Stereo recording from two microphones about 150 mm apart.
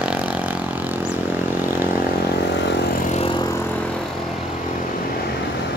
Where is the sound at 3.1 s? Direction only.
35° left (ahead or behind).